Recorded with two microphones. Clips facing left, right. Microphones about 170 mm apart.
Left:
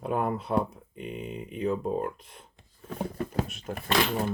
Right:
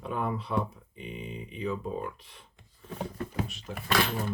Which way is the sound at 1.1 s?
Centre (ahead or behind).